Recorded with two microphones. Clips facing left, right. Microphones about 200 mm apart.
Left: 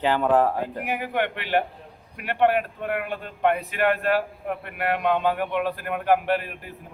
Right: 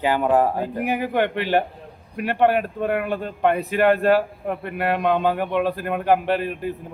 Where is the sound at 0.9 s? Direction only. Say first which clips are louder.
Right 5 dB; 35° right (ahead or behind).